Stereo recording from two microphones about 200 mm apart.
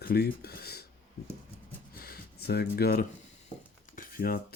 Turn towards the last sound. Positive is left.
turn(degrees=50)  # may be behind; listen again after turning